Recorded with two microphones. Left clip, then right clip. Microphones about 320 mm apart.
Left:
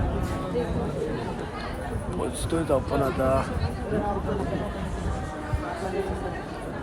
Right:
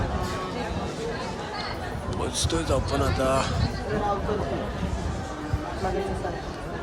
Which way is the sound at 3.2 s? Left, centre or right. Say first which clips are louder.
Right 2 dB; centre.